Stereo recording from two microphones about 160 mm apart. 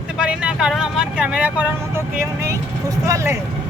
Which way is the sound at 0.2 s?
5° right (ahead or behind).